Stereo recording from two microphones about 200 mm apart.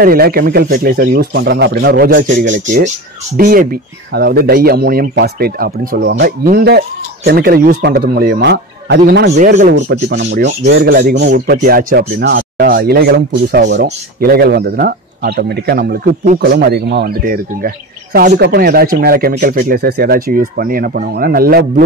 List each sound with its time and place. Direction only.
0.0 s speech: 50° right (ahead or behind)
9.6 s speech: 40° right (ahead or behind)
10.0 s speech: 60° right (ahead or behind)